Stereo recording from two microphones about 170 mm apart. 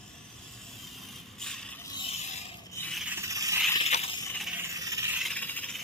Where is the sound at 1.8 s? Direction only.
25° left (ahead or behind).